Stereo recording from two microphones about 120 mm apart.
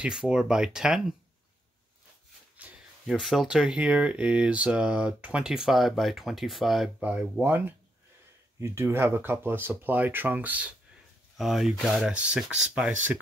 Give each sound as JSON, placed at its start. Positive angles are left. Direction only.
{"t": 0.0, "sound": "speech", "side_deg": -5}
{"t": 2.5, "sound": "a sound", "side_deg": -10}
{"t": 3.1, "sound": "speech", "side_deg": 0}
{"t": 11.3, "sound": "speech", "side_deg": 0}